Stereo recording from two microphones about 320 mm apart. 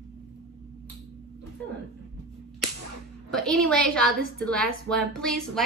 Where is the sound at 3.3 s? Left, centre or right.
Centre.